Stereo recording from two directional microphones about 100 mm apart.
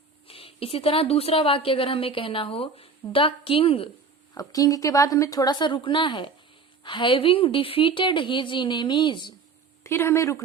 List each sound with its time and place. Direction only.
0.3 s a woman's voice: 70° left (ahead or behind)
4.4 s a woman's voice: 35° left (ahead or behind)
9.8 s speech: 25° left (ahead or behind)